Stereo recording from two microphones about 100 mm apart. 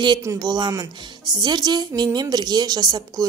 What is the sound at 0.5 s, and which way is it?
A woman's voice, 40° right (ahead or behind).